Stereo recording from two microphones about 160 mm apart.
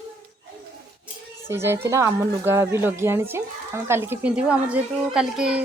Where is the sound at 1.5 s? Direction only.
15° right (ahead or behind).